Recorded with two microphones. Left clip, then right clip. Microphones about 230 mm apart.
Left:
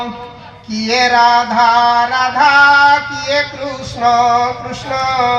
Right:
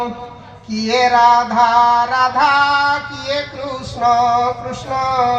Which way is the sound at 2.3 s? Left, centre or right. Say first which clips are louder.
Left 8 dB; left.